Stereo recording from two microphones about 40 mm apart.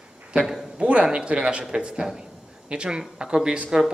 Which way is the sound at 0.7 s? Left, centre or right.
Right.